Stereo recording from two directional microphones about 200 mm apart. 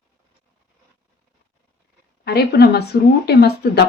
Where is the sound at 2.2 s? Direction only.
55° left (ahead or behind).